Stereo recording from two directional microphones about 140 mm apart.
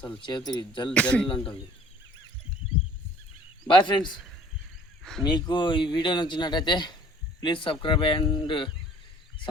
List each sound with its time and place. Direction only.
0.2 s speech: 35° left (ahead or behind)
0.9 s speech: 10° left (ahead or behind)
3.7 s speech: 35° left (ahead or behind)
5.2 s speech: 30° left (ahead or behind)